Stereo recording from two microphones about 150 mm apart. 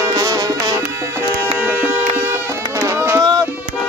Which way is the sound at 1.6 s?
10° right (ahead or behind).